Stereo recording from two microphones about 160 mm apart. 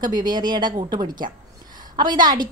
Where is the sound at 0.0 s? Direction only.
25° right (ahead or behind).